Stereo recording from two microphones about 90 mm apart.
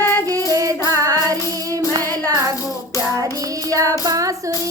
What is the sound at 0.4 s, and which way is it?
Child singing, 40° right (ahead or behind).